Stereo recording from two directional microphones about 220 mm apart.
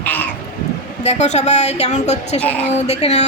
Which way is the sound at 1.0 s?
30° left (ahead or behind).